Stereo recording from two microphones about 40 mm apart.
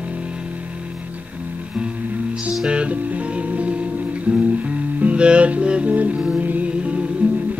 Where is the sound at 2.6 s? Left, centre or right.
Right.